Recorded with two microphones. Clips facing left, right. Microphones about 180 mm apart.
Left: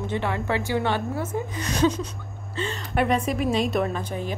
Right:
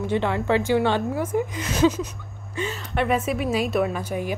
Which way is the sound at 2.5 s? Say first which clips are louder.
Right 1 dB; 10° right (ahead or behind).